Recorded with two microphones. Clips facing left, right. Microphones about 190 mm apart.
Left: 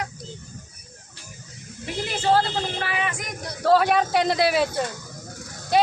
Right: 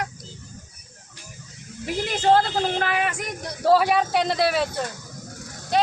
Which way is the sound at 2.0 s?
45° right (ahead or behind).